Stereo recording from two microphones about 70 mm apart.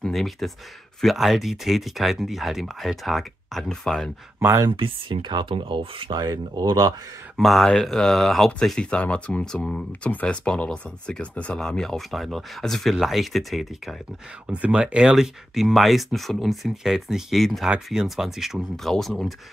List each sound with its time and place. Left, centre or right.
0.0 s speech: centre
6.1 s speech: right
7.3 s speech: centre
9.4 s speech: centre
10.0 s speech: centre
14.5 s speech: centre